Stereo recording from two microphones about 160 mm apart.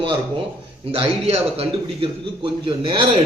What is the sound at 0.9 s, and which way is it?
A man's voice, 35° right (ahead or behind).